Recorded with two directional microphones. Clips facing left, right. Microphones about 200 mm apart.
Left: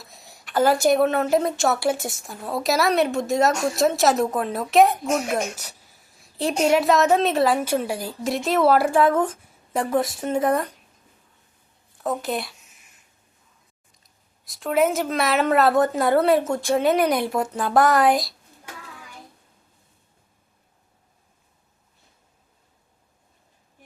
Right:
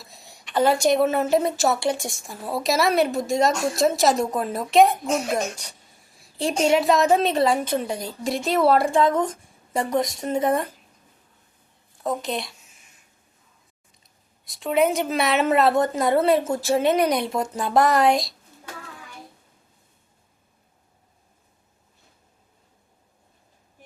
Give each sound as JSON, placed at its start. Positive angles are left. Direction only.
{"t": 0.0, "sound": "a woman's voice", "side_deg": 0}
{"t": 12.2, "sound": "a woman's voice", "side_deg": 5}
{"t": 14.0, "sound": "a woman's voice", "side_deg": 0}
{"t": 17.0, "sound": "speech", "side_deg": -25}
{"t": 17.4, "sound": "a woman's voice", "side_deg": 0}